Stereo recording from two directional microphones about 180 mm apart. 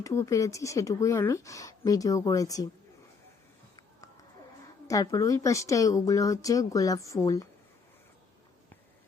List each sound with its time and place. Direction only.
0.0 s speech: 15° left (ahead or behind)
4.9 s speech: 20° left (ahead or behind)